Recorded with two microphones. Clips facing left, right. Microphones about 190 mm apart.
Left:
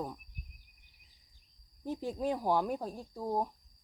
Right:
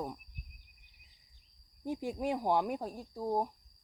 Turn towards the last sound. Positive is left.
turn(degrees=-5)  # may be behind; listen again after turning